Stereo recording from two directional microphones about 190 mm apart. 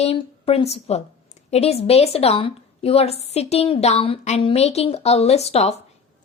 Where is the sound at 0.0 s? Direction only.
30° left (ahead or behind).